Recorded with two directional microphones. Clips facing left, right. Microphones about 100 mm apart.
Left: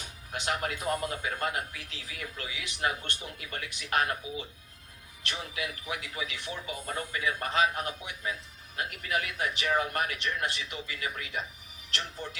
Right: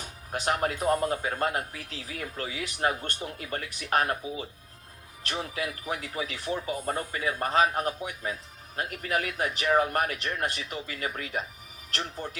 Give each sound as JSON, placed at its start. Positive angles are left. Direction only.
{"t": 0.3, "sound": "speech", "side_deg": -35}